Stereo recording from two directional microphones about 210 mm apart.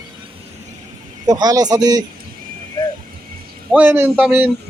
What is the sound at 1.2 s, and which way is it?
Speech, 20° right (ahead or behind).